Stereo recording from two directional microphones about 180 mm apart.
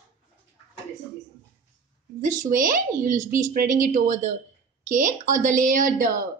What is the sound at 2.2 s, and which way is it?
A woman's voice, 45° right (ahead or behind).